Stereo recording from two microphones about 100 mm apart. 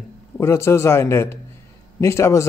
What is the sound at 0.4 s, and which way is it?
A man's voice, 25° left (ahead or behind).